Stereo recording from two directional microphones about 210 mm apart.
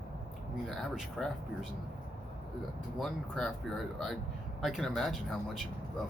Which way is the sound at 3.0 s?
Centre (ahead or behind).